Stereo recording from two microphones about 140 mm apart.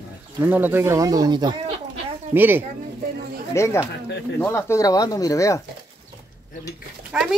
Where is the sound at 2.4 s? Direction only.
15° right (ahead or behind).